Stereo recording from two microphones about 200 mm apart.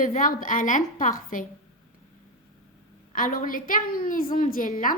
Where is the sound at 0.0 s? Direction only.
40° left (ahead or behind).